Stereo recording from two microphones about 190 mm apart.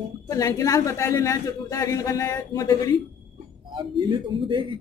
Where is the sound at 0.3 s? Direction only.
15° left (ahead or behind).